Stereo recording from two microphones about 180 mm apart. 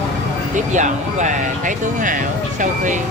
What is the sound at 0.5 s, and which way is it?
Speech, 40° right (ahead or behind).